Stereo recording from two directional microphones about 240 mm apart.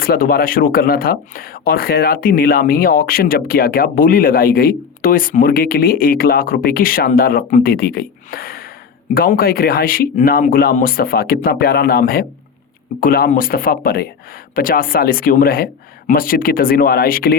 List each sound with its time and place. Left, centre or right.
0.0 s speech: left